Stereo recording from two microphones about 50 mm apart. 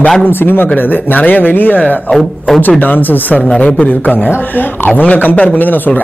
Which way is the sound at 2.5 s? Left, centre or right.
Left.